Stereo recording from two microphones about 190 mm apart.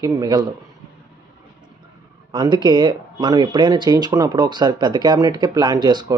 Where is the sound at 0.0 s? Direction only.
20° right (ahead or behind).